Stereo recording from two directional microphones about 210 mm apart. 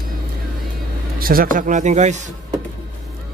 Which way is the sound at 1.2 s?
45° right (ahead or behind).